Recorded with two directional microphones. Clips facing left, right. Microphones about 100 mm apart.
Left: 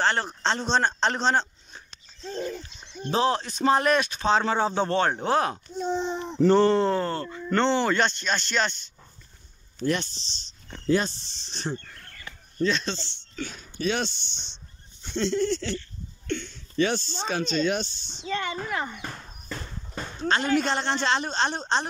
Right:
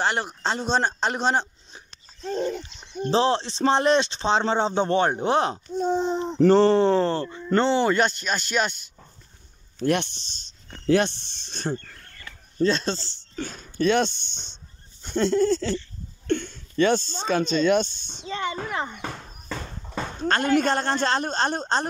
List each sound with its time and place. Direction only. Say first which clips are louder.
0.0 s a man's voice: even; 15° right (ahead or behind)
2.2 s a sound: right 5 dB; 75° right (ahead or behind)
3.1 s speech: right 2 dB; 30° right (ahead or behind)
5.8 s a man's voice: right 5 dB; 40° right (ahead or behind); by 8.8 s 10° right (ahead or behind)
9.8 s speech: right 3 dB; 60° right (ahead or behind)
10.9 s speech: right 3 dB; 70° right (ahead or behind)
12.6 s speech: right 3 dB; 40° right (ahead or behind)
15.0 s goat: right 4 dB; 50° right (ahead or behind)
16.3 s speech: right 6 dB; 50° right (ahead or behind)
18.3 s speech: right 1 dB; 25° right (ahead or behind)
19.9 s a sound: right 6 dB; 90° right
20.2 s speech: right 2 dB; 50° right (ahead or behind)